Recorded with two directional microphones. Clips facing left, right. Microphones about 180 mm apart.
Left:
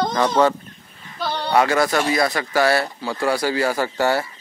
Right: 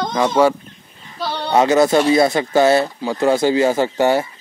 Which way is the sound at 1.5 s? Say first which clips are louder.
Right 5 dB; 20° right (ahead or behind).